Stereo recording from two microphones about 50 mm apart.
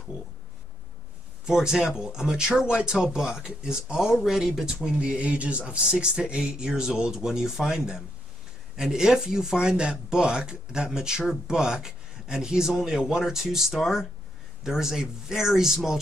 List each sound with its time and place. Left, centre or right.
1.4 s speech: centre
4.8 s speech: right